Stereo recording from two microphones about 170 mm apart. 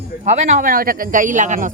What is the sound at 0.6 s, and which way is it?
A woman's voice, 55° right (ahead or behind).